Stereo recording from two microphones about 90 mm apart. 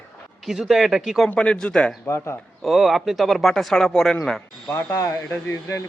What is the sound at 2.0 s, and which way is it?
Speech, 30° left (ahead or behind).